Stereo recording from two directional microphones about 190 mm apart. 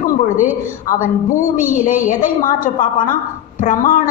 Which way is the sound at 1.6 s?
45° left (ahead or behind).